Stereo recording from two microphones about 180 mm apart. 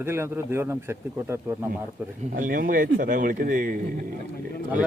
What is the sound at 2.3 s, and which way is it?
A man's voice, 50° right (ahead or behind).